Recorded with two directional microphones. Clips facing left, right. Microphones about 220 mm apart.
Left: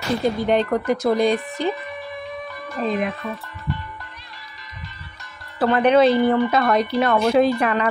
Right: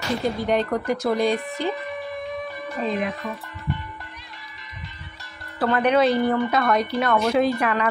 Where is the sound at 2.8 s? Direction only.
15° right (ahead or behind).